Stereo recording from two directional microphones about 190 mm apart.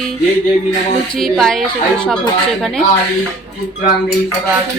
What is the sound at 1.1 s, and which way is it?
Speech, centre (ahead or behind).